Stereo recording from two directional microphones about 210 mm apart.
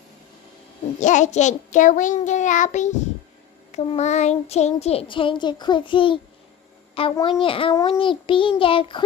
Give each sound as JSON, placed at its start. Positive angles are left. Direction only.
{"t": 0.9, "sound": "a child's voice", "side_deg": 35}